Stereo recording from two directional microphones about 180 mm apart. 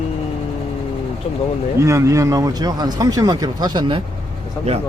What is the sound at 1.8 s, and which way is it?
Speech, 15° right (ahead or behind).